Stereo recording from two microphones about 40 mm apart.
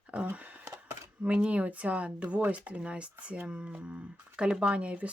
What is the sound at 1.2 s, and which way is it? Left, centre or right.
Speech, right.